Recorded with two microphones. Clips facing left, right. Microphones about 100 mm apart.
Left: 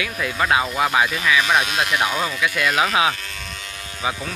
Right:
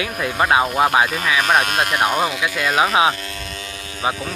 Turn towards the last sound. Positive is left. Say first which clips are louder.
# right 3 dB
turn(degrees=-25)  # may be behind; listen again after turning